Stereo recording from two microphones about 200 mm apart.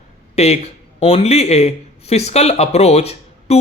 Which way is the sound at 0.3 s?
30° left (ahead or behind).